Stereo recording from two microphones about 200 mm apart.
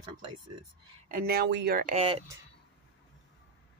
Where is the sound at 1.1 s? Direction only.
50° right (ahead or behind).